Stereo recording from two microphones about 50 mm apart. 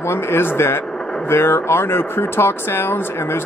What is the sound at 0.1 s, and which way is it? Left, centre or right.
Speech, left.